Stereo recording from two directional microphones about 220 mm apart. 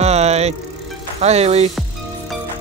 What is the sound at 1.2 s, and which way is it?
Music, 30° right (ahead or behind).